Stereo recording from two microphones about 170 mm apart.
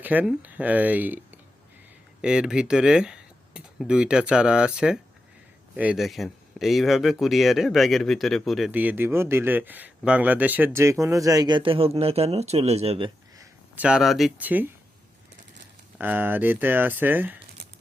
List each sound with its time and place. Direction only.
0.0 s speech: 10° right (ahead or behind); by 13.1 s 35° right (ahead or behind)
13.4 s speech: 10° right (ahead or behind)
16.0 s speech: 10° right (ahead or behind)